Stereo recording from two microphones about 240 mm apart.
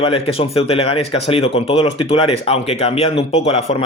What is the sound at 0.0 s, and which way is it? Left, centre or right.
Speech, left.